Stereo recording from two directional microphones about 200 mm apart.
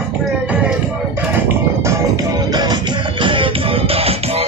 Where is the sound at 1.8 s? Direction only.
20° right (ahead or behind).